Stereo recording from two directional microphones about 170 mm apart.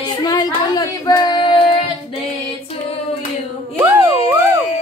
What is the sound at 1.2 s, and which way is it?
Child singing, 25° left (ahead or behind).